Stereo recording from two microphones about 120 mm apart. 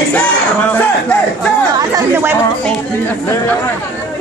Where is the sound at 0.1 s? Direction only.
10° left (ahead or behind).